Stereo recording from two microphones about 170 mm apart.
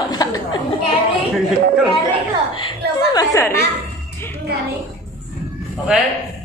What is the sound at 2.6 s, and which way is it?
Speech, 25° left (ahead or behind).